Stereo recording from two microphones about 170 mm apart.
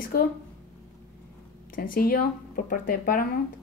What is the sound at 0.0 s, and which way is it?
Speech, 60° left (ahead or behind).